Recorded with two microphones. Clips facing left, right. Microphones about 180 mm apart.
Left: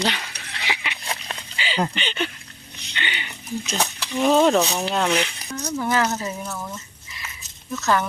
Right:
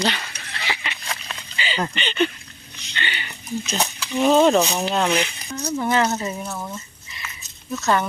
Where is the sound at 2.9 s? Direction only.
15° left (ahead or behind).